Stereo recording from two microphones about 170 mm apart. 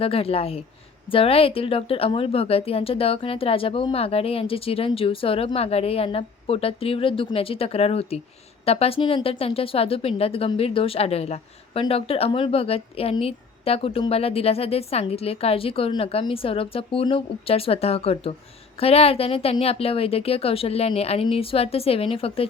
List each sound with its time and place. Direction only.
0.0 s speech: 35° left (ahead or behind)